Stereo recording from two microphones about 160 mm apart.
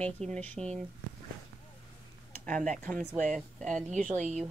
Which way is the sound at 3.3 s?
Centre (ahead or behind).